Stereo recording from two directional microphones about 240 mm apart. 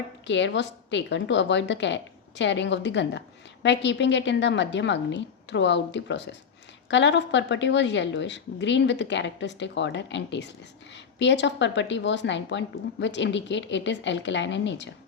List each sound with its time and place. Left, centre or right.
0.3 s a woman's voice: left